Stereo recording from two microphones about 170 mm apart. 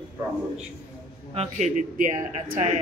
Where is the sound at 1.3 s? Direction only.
45° right (ahead or behind).